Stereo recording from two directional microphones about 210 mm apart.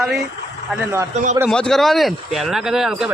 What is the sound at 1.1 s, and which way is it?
Speech, 35° right (ahead or behind).